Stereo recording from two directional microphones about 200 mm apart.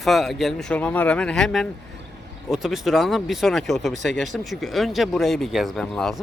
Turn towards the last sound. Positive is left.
turn(degrees=0)  # may be behind; listen again after turning